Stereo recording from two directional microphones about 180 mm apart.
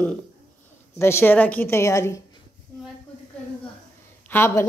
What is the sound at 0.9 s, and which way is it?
A woman's voice, 15° left (ahead or behind).